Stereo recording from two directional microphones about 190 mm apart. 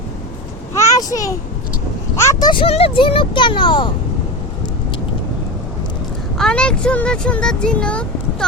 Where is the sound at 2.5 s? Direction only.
30° left (ahead or behind).